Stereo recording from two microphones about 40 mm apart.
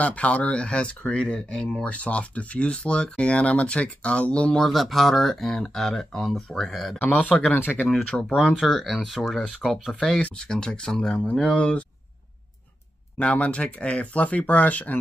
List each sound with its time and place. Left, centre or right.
0.0 s speech: left
1.9 s speech: left
4.6 s speech: centre
7.0 s speech: left
7.5 s speech: left
8.1 s speech: centre
9.9 s speech: centre
13.2 s speech: left